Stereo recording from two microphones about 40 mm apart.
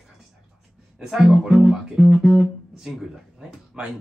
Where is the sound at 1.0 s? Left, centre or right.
Centre.